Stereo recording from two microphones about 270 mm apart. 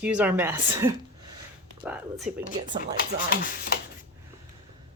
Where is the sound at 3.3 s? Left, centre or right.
Left.